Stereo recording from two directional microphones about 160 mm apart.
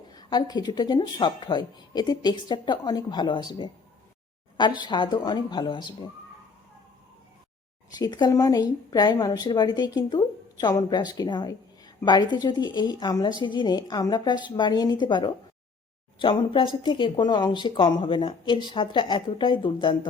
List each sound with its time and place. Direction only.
0.1 s speech: 25° left (ahead or behind)
7.9 s speech: 25° left (ahead or behind)